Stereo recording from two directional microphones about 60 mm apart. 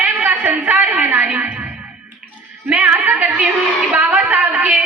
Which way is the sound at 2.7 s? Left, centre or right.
Right.